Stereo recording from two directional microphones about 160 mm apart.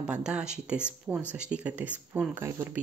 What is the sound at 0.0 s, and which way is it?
Speech, 5° right (ahead or behind).